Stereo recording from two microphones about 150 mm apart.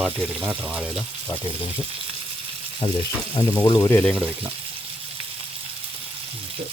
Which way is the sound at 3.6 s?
25° left (ahead or behind).